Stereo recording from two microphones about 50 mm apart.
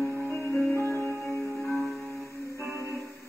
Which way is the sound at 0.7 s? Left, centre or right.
Left.